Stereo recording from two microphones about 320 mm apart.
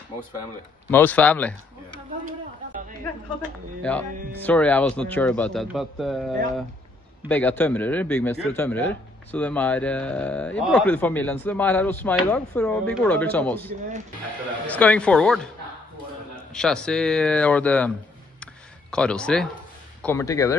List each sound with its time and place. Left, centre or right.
0.8 s speech: centre
3.4 s speech: centre
16.5 s speech: centre
18.4 s a sound: centre
20.0 s speech: centre